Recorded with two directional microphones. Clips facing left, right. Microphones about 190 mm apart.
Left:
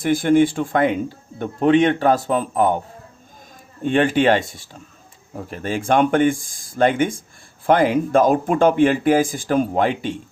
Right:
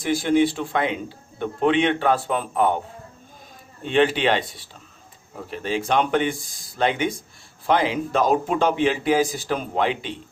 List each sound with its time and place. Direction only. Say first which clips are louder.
0.0 s speech: left 4 dB; 50° left (ahead or behind)
3.8 s speech: left 3 dB; 50° left (ahead or behind)